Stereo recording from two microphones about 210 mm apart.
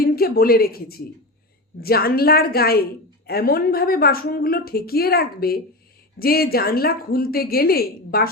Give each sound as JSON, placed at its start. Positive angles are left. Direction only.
{"t": 0.0, "sound": "a woman's voice", "side_deg": 45}